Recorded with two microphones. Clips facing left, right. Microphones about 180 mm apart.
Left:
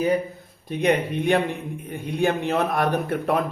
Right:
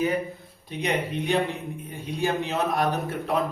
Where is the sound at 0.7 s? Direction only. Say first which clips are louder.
Left 6 dB; 55° left (ahead or behind).